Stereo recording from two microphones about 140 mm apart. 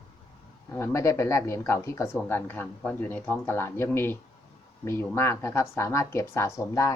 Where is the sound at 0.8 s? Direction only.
20° left (ahead or behind).